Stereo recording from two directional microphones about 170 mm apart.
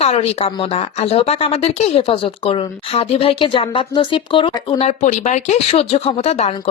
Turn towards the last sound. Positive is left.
turn(degrees=40)  # may be behind; listen again after turning